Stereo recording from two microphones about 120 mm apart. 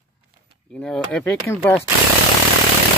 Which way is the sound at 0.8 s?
5° left (ahead or behind).